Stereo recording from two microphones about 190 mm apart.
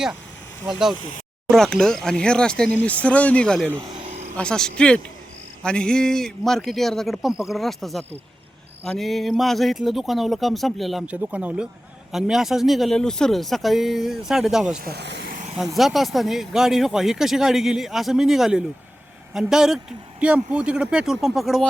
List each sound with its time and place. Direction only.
0.7 s speech: centre (ahead or behind)
14.8 s speech: 55° right (ahead or behind)
15.5 s speech: centre (ahead or behind)